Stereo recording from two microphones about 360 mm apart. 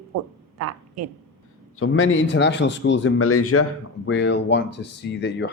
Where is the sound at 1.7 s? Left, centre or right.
Left.